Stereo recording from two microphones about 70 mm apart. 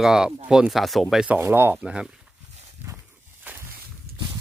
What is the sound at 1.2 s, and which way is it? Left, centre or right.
Speech, centre.